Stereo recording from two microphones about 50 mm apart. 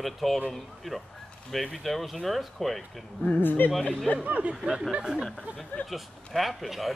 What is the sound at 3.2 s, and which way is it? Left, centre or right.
Speech, left.